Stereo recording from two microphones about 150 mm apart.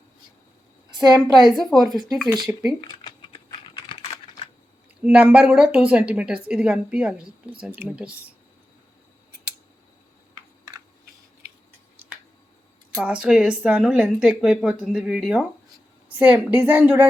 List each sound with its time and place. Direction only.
1.4 s speech: centre (ahead or behind)
2.8 s typing: 30° left (ahead or behind)
4.9 s a woman's voice: 10° right (ahead or behind)
10.7 s typing: 25° right (ahead or behind)
13.0 s a woman's voice: 5° right (ahead or behind)